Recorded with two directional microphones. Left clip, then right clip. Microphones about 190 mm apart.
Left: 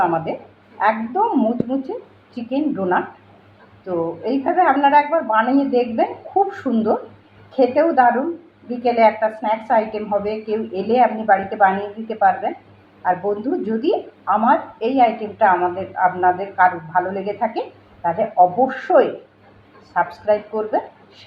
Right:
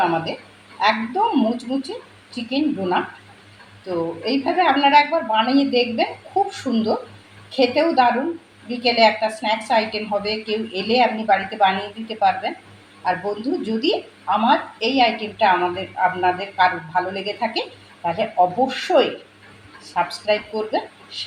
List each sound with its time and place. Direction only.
0.0 s a woman's voice: 15° right (ahead or behind)